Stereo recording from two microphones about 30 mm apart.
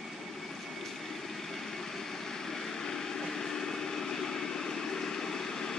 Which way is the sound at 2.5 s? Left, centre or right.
Centre.